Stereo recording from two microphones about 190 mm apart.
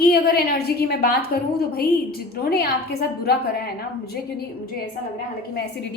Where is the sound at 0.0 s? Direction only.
55° left (ahead or behind).